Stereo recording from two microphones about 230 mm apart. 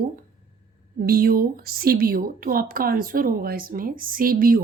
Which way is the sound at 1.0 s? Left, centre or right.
Right.